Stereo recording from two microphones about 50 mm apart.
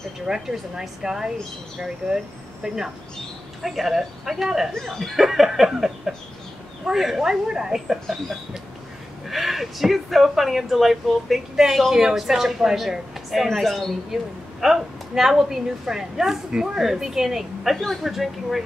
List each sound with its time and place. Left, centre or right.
0.3 s a man's voice: centre
2.6 s a man's voice: centre
9.3 s a man's voice: centre